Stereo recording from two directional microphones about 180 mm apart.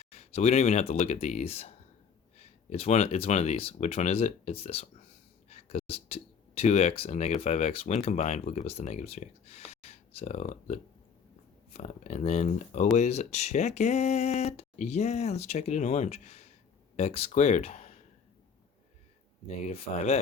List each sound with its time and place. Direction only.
0.0 s speech: 35° left (ahead or behind)
19.5 s speech: 35° left (ahead or behind)